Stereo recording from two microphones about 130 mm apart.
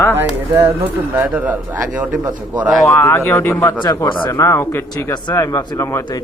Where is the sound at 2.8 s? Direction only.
20° left (ahead or behind).